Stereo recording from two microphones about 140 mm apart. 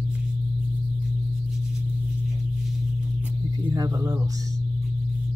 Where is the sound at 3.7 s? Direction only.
25° right (ahead or behind).